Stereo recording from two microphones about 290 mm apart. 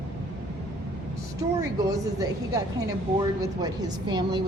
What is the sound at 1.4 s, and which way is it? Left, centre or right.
Speech, centre.